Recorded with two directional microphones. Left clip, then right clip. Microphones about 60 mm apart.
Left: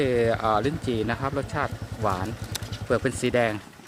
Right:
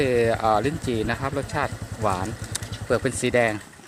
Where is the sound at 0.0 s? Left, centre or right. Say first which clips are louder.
Right 2 dB; centre.